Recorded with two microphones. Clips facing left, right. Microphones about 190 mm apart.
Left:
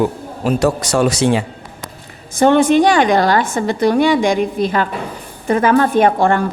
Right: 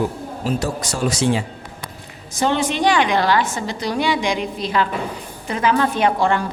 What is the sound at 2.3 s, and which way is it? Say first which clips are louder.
A woman's voice: left 9 dB; 55° left (ahead or behind).